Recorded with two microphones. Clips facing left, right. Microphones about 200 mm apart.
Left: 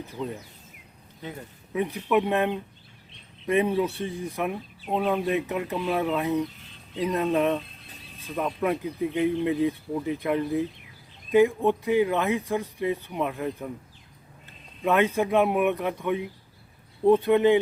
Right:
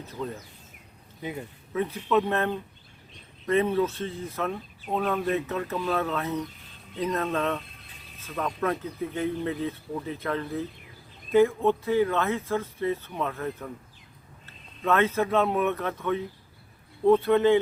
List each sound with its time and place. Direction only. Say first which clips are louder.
0.1 s speech: even; 15° left (ahead or behind)
1.7 s speech: left 1 dB; 15° left (ahead or behind)